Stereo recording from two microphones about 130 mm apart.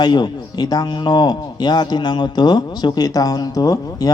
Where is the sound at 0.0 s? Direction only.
35° left (ahead or behind).